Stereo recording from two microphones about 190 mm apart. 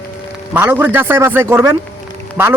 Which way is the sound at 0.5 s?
10° right (ahead or behind).